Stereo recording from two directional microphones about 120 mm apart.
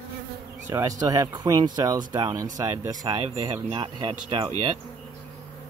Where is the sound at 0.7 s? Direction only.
25° right (ahead or behind).